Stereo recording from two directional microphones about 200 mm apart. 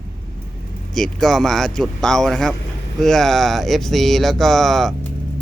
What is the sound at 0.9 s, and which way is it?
Speech, centre (ahead or behind).